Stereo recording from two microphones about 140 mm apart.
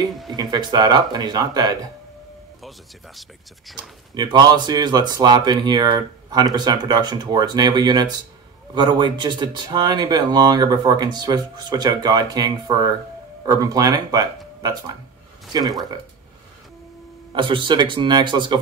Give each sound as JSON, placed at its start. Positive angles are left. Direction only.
{"t": 0.1, "sound": "speech", "side_deg": 0}
{"t": 0.4, "sound": "speech", "side_deg": -30}
{"t": 4.1, "sound": "speech", "side_deg": -30}
{"t": 17.3, "sound": "speech", "side_deg": -35}